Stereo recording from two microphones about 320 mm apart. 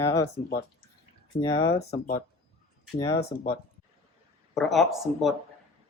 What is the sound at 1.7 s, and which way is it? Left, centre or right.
Speech, left.